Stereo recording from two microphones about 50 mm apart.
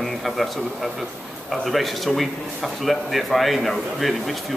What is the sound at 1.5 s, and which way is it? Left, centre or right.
A man's voice, centre.